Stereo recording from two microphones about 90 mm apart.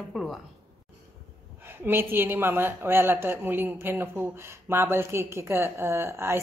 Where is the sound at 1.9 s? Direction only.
25° right (ahead or behind).